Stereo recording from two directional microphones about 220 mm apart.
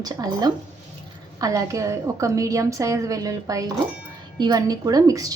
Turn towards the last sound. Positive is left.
turn(degrees=-15)  # may be behind; listen again after turning